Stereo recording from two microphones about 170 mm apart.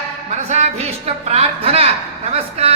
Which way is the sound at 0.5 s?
40° right (ahead or behind).